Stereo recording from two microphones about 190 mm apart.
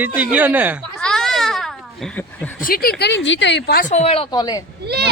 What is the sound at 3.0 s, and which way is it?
Speech, 65° left (ahead or behind).